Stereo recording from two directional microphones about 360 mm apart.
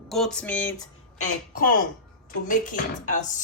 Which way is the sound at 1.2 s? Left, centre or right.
Left.